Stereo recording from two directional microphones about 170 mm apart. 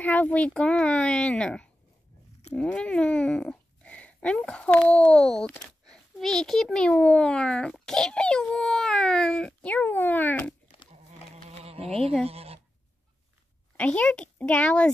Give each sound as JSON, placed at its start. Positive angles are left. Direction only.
{"t": 0.0, "sound": "speech", "side_deg": 10}
{"t": 11.6, "sound": "insect", "side_deg": -35}
{"t": 12.3, "sound": "speech", "side_deg": -35}
{"t": 13.7, "sound": "speech", "side_deg": 5}